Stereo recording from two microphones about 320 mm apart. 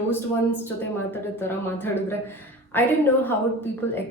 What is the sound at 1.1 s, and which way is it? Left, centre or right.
Speech, centre.